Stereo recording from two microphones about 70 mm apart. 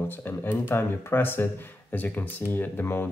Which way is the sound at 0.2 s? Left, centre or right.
Left.